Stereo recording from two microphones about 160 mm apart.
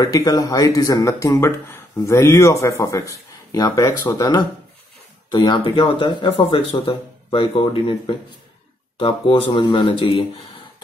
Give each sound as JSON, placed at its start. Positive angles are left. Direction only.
{"t": 0.0, "sound": "speech", "side_deg": 25}